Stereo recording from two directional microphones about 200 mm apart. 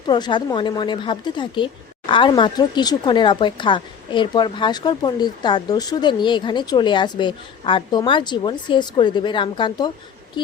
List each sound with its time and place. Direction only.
0.1 s a woman's voice: 20° left (ahead or behind)